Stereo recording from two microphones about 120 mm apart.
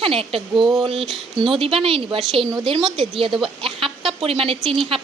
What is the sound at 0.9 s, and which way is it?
Speech, centre (ahead or behind).